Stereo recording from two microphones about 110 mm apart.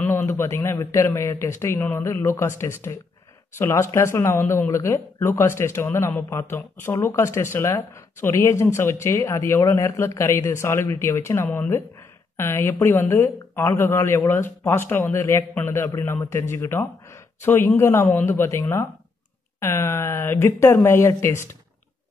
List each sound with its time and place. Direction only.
0.1 s speech: 25° left (ahead or behind)